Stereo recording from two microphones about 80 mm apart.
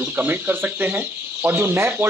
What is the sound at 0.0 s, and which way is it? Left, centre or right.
Speech, right.